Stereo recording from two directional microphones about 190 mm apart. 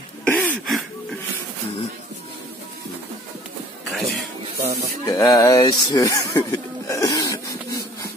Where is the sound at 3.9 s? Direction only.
Centre (ahead or behind).